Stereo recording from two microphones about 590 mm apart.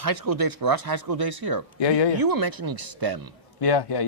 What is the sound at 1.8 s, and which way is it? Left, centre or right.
Speech, left.